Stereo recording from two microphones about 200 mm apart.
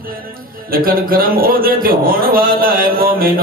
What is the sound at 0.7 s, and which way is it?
A man's voice, 45° right (ahead or behind).